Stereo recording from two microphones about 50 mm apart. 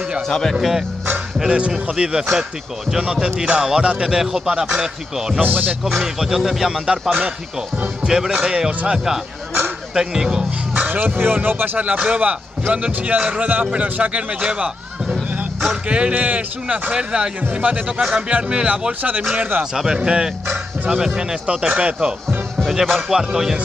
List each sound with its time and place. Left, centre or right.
0.5 s speech: centre
5.4 s speech: right
5.9 s speech: centre
7.1 s a man's voice: right
8.1 s speech: centre
10.9 s speech: right
11.8 s a man's voice: right
19.3 s speech: right
19.6 s speech: centre
22.6 s music: centre
23.1 s speech: centre